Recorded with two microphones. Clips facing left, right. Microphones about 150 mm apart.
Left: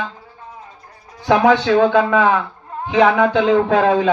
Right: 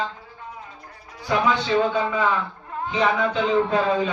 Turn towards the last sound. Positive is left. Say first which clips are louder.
# left 6 dB
turn(degrees=85)